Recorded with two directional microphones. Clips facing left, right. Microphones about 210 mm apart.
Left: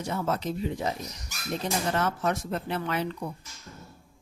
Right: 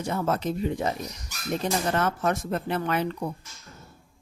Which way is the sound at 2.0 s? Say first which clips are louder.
Right 2 dB; 55° right (ahead or behind).